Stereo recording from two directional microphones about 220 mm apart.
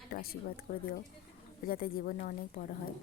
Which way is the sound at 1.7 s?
40° left (ahead or behind).